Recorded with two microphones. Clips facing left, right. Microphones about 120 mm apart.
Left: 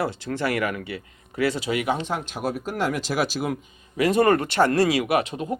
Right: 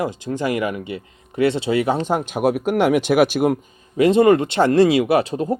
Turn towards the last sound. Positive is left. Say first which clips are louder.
# right 5 dB
turn(degrees=-35)  # may be behind; listen again after turning